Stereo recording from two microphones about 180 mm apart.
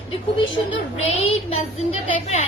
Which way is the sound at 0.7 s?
35° left (ahead or behind).